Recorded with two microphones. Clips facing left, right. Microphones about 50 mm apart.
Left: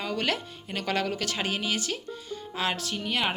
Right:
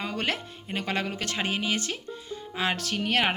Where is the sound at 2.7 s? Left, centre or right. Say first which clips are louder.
Right 3 dB; right.